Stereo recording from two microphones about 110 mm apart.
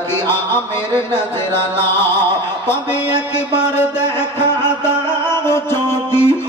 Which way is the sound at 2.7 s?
20° left (ahead or behind).